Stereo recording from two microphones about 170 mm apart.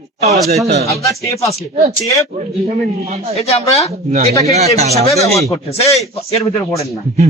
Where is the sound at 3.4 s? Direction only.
35° left (ahead or behind).